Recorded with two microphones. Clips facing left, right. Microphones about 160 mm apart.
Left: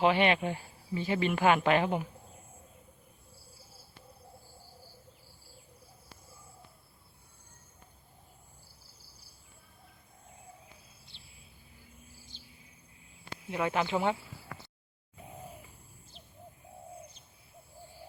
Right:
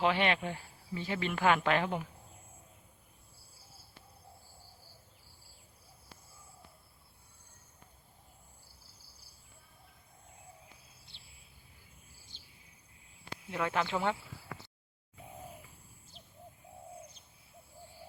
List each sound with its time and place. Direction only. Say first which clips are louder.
0.0 s speech: left 4 dB; 10° left (ahead or behind)
11.1 s a sound: left 3 dB; 55° right (ahead or behind)
13.5 s speech: left 3 dB; 10° left (ahead or behind)